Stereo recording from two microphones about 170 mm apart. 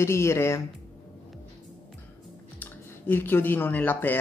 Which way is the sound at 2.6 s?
10° left (ahead or behind).